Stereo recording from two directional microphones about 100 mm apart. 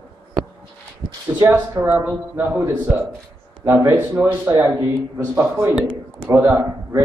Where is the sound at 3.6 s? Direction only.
25° right (ahead or behind).